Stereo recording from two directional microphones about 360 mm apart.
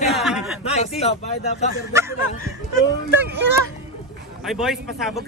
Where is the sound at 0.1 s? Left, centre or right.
Centre.